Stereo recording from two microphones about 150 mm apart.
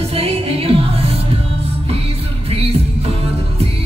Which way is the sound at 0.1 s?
40° right (ahead or behind).